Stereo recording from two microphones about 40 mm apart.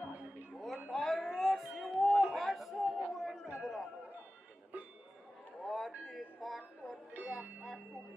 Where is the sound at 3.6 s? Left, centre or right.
Centre.